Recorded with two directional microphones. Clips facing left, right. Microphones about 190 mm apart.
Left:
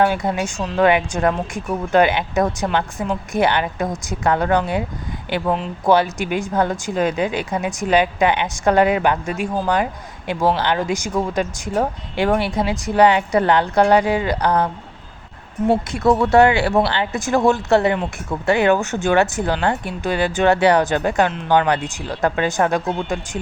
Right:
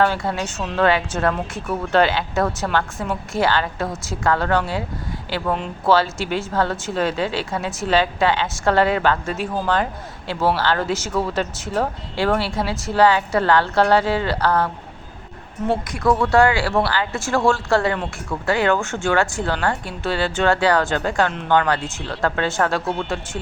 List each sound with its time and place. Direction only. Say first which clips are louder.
0.0 s speech: left 2 dB; 15° left (ahead or behind)
15.7 s speech: left 3 dB; 25° left (ahead or behind)